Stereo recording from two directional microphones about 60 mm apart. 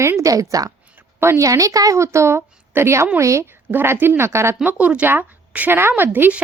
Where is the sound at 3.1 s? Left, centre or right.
Right.